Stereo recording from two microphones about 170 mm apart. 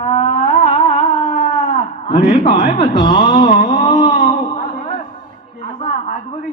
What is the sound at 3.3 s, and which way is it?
Speech, 50° left (ahead or behind).